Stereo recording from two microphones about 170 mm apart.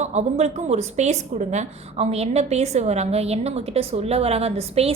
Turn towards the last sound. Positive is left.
turn(degrees=-35)  # may be behind; listen again after turning